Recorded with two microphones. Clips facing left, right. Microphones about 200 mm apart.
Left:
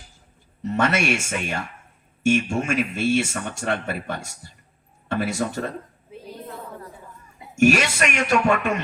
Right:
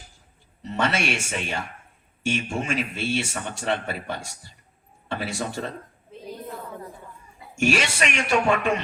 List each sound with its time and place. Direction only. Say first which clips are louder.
0.6 s speech: left 3 dB; 45° left (ahead or behind)
6.1 s a sound: left 1 dB; 10° left (ahead or behind)
7.5 s speech: left 5 dB; 40° left (ahead or behind)